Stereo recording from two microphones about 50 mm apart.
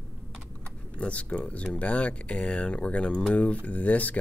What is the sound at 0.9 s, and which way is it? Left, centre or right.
Speech, left.